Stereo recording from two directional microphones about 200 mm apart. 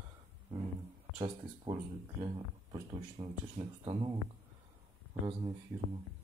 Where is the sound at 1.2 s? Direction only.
25° right (ahead or behind).